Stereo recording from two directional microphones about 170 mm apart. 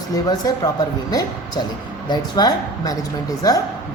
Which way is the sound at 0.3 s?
20° left (ahead or behind).